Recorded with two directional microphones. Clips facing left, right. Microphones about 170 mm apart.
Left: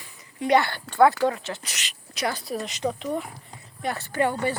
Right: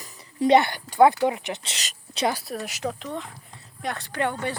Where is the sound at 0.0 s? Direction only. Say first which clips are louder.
Right 7 dB; 35° right (ahead or behind).